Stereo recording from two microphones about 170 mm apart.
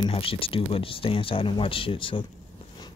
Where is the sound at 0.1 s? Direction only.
35° left (ahead or behind).